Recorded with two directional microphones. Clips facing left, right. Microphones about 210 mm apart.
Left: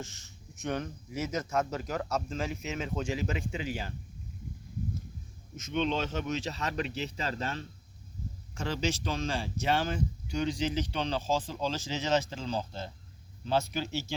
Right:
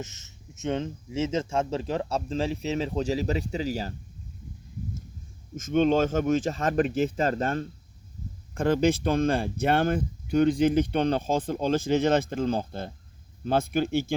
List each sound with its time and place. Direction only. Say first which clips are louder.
0.0 s speech: right 4 dB; 20° right (ahead or behind); by 3.9 s 40° right (ahead or behind)
5.5 s speech: right 9 dB; 45° right (ahead or behind)